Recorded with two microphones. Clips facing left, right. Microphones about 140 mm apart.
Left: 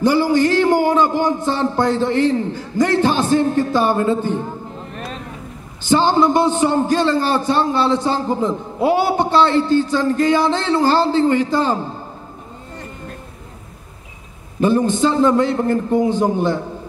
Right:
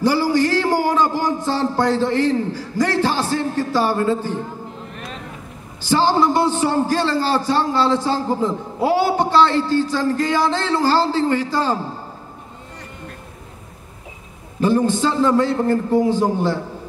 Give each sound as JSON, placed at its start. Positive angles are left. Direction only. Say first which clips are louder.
{"t": 0.0, "sound": "a man's voice", "louder": "left 2 dB", "side_deg": 20}
{"t": 5.8, "sound": "a man's voice", "louder": "left 2 dB", "side_deg": 20}
{"t": 14.6, "sound": "a man's voice", "louder": "left 2 dB", "side_deg": 20}